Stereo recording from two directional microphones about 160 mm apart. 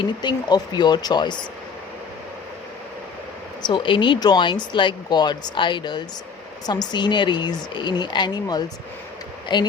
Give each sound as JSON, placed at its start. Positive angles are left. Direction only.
{"t": 0.0, "sound": "speech", "side_deg": 30}
{"t": 3.6, "sound": "speech", "side_deg": 30}